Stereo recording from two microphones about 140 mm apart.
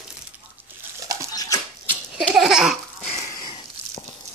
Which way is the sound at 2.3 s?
5° right (ahead or behind).